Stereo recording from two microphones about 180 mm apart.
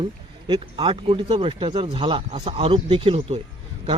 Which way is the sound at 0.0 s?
25° right (ahead or behind).